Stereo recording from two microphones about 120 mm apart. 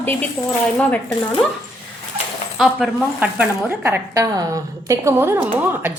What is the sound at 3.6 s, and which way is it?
A woman's voice, 20° right (ahead or behind).